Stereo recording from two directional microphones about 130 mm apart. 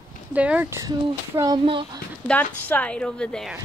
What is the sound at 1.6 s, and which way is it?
Speech, 40° right (ahead or behind).